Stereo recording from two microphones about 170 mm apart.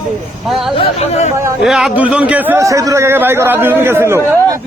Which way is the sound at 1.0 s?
40° left (ahead or behind).